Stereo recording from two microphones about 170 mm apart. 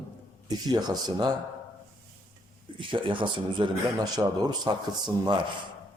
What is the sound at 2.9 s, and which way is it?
Speech, 30° right (ahead or behind).